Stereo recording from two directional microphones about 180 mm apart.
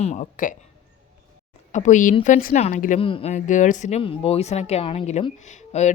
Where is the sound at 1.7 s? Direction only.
40° left (ahead or behind).